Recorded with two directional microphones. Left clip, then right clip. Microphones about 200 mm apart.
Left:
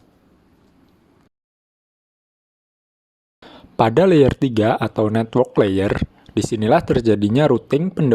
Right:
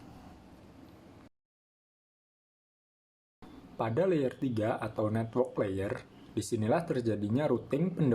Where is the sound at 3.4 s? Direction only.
45° left (ahead or behind).